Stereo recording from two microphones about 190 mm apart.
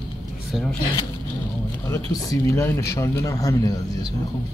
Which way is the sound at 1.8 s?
15° left (ahead or behind).